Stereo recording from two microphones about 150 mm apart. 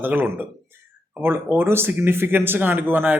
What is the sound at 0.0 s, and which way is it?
Speech, 10° right (ahead or behind).